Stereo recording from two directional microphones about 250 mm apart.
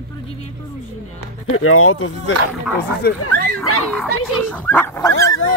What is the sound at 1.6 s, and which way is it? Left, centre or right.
Speech, left.